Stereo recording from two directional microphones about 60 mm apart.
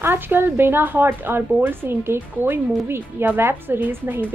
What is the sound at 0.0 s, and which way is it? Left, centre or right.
Speech, right.